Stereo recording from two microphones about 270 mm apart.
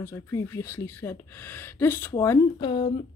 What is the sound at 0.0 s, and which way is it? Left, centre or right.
Speech, centre.